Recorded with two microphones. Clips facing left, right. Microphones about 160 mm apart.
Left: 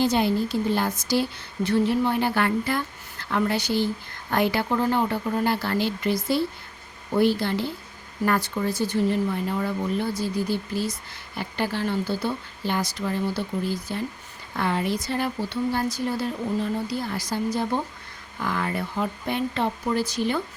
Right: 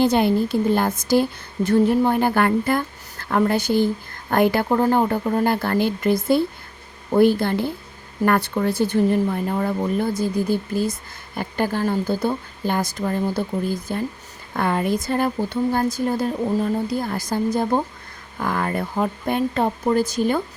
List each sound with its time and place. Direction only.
0.0 s a woman's voice: 55° right (ahead or behind)